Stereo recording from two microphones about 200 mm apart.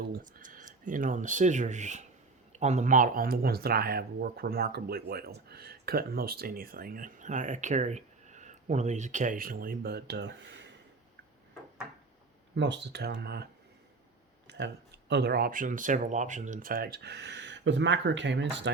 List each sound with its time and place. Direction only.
0.1 s speech: 40° right (ahead or behind); by 10.7 s 65° right (ahead or behind)
12.5 s speech: 60° right (ahead or behind)
14.4 s a sound: 60° right (ahead or behind)
15.1 s speech: 55° right (ahead or behind)